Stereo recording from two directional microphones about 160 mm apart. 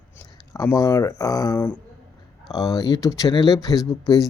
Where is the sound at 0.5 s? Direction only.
20° left (ahead or behind).